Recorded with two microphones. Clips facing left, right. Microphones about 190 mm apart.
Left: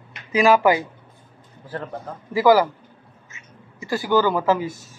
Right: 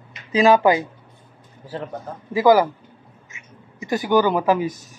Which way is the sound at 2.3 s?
20° right (ahead or behind).